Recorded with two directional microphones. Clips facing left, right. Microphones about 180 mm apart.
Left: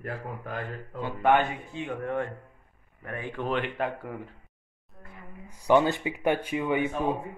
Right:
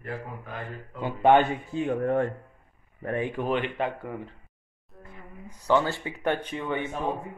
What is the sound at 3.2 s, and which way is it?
Speech, 15° right (ahead or behind).